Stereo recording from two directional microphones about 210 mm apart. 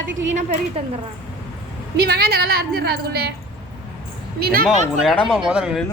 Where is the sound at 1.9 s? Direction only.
50° right (ahead or behind).